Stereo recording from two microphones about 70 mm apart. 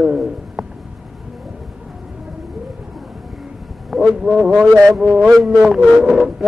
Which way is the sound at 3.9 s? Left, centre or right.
Centre.